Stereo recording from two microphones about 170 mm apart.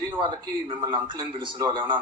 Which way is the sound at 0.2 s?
30° right (ahead or behind).